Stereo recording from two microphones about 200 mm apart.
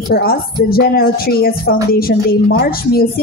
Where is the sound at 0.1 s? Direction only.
50° left (ahead or behind).